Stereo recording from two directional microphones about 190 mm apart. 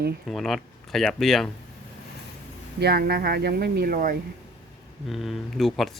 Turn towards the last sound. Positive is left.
turn(degrees=0)  # may be behind; listen again after turning